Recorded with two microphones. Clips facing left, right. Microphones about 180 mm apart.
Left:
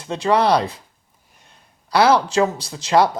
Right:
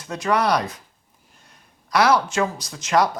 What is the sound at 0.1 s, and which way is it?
Speech, 30° left (ahead or behind).